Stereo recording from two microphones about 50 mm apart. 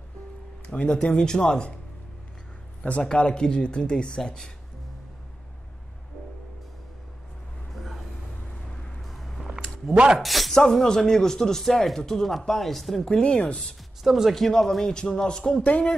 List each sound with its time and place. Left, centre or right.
0.7 s speech: centre
2.8 s speech: left
9.0 s a sound: centre
10.1 s speech: centre
13.1 s speech: centre
14.0 s speech: centre
14.3 s speech: centre
15.6 s speech: left